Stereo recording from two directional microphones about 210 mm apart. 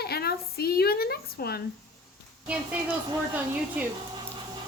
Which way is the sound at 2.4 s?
5° right (ahead or behind).